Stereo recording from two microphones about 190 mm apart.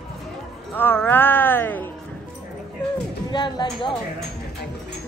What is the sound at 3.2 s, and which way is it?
Speech, 25° left (ahead or behind).